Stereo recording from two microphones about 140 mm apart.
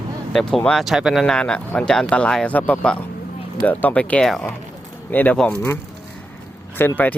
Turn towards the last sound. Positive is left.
turn(degrees=15)  # may be behind; listen again after turning